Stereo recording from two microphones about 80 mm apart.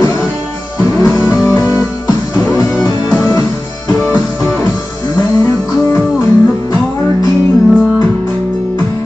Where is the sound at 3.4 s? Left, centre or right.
Left.